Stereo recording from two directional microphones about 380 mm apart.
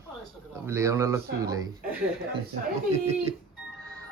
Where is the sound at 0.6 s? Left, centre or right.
Centre.